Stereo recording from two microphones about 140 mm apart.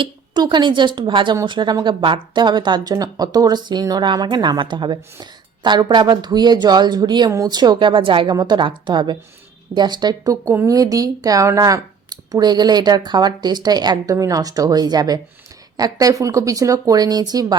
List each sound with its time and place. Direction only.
0.3 s speech: 30° right (ahead or behind)